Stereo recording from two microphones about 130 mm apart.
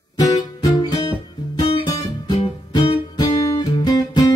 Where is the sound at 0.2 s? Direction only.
25° left (ahead or behind).